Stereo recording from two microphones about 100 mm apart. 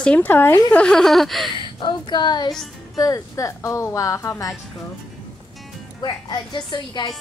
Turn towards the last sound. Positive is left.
turn(degrees=50)  # may be behind; listen again after turning